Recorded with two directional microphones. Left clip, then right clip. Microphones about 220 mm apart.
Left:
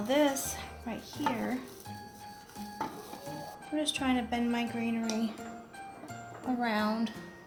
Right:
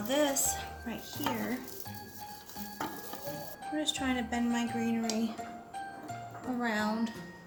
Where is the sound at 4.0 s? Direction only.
35° left (ahead or behind).